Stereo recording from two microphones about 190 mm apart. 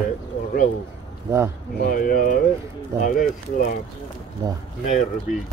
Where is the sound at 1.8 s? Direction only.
50° left (ahead or behind).